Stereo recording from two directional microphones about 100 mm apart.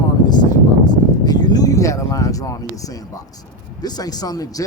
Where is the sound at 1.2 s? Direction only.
40° left (ahead or behind).